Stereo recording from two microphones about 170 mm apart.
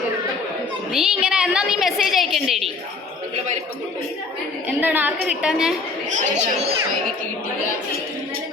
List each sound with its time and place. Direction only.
0.9 s a woman's voice: 5° right (ahead or behind)
4.8 s a woman's voice: 10° right (ahead or behind)
6.1 s speech: 40° right (ahead or behind)